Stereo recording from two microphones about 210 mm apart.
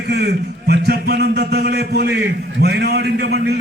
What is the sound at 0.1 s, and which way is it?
A man's voice, 50° right (ahead or behind).